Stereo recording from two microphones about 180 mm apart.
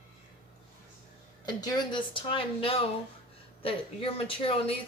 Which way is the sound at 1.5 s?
20° left (ahead or behind).